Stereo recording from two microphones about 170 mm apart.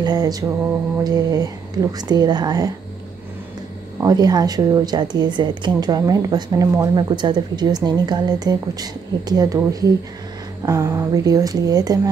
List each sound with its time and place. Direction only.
0.0 s speech: 25° right (ahead or behind)
4.0 s speech: 20° right (ahead or behind)